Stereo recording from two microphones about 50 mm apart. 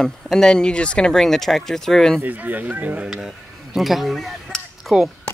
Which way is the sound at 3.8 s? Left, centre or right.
Centre.